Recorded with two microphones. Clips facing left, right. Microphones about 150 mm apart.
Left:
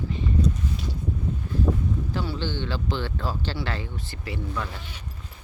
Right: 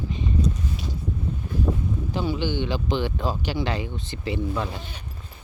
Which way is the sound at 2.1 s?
15° right (ahead or behind).